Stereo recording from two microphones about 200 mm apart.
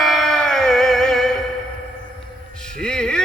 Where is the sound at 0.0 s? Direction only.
Centre (ahead or behind).